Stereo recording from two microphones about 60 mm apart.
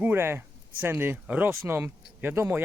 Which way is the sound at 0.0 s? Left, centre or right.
Right.